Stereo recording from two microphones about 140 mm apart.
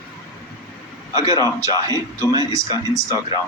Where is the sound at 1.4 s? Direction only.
25° right (ahead or behind).